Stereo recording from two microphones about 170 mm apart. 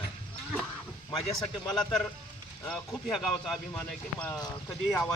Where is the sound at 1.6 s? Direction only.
5° left (ahead or behind).